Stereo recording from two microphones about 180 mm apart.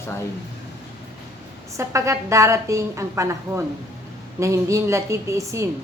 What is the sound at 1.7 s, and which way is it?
A woman's voice, 15° right (ahead or behind).